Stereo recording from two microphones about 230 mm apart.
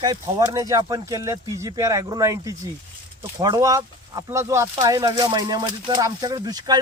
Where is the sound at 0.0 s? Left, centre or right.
Centre.